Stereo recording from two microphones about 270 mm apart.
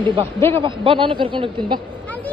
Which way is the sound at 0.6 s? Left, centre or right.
Centre.